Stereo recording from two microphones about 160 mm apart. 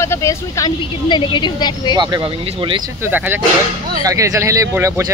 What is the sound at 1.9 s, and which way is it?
Speech, 30° right (ahead or behind).